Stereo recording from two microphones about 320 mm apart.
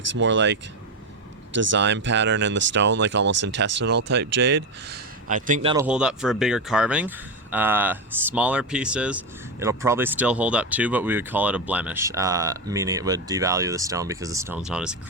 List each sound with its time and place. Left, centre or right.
0.1 s speech: right
1.7 s speech: right
5.7 s speech: centre